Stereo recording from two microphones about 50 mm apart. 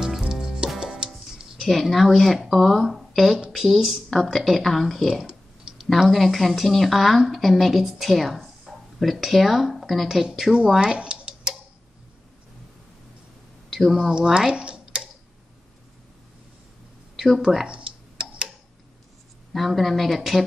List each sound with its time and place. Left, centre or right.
0.3 s music: centre
1.7 s speech: centre
10.2 s speech: centre
10.7 s a sound: centre
13.7 s a sound: centre
13.9 s speech: centre
17.2 s speech: centre
17.6 s tick: right
19.5 s speech: centre